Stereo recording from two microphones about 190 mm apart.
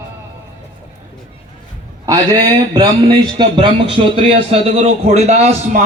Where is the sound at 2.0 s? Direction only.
20° right (ahead or behind); by 5.8 s 35° right (ahead or behind).